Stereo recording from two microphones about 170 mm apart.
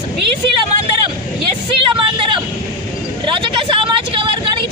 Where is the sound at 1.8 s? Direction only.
30° right (ahead or behind).